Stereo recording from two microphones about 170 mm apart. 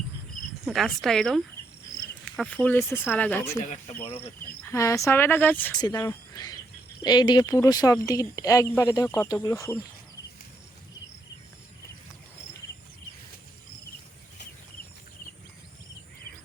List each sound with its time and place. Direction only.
0.6 s a woman's voice: centre (ahead or behind)
4.0 s speech: 35° left (ahead or behind)
4.7 s speech: 20° left (ahead or behind)
5.7 s speech: 25° left (ahead or behind)